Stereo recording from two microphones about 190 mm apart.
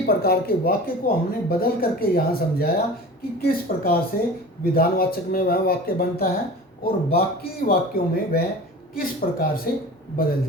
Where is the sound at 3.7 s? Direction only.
50° left (ahead or behind).